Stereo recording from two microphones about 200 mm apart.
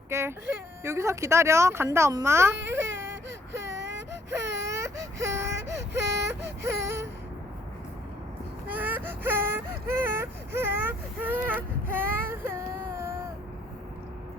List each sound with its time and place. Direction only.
0.1 s speech: 15° right (ahead or behind)
3.5 s whimper: 65° right (ahead or behind)
4.3 s baby cry: 15° right (ahead or behind)
6.8 s a sound: 10° right (ahead or behind)
8.6 s baby cry: 10° right (ahead or behind)